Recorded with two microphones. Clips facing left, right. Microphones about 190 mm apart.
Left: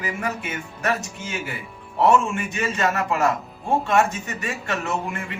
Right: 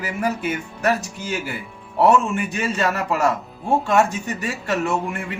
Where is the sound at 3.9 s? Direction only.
35° right (ahead or behind).